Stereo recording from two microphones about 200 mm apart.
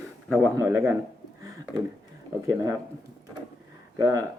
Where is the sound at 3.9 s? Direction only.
15° right (ahead or behind).